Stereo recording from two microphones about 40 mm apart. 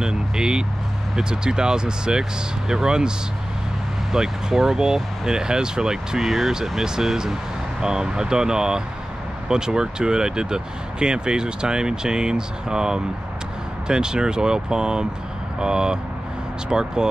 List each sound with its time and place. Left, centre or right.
0.0 s speech: centre
4.1 s speech: centre